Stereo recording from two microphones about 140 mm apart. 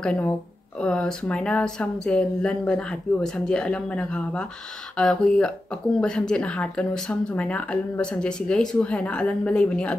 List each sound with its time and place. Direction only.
0.0 s speech: 5° left (ahead or behind)